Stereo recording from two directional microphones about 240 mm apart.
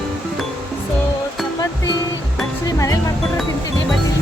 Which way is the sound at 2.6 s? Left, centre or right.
Centre.